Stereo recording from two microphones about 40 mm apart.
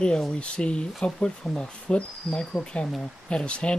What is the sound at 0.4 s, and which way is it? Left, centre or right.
Speech, left.